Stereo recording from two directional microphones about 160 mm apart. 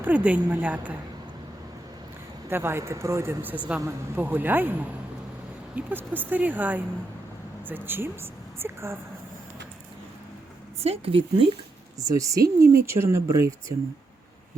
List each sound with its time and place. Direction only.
0.0 s speech: 10° right (ahead or behind)
2.5 s speech: 15° right (ahead or behind)
10.8 s speech: 40° right (ahead or behind)
11.9 s speech: 20° right (ahead or behind)